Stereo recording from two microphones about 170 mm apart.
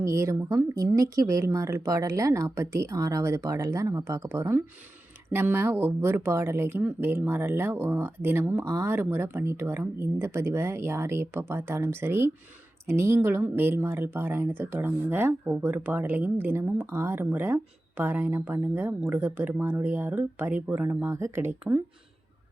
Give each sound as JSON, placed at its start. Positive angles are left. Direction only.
{"t": 0.0, "sound": "speech", "side_deg": -15}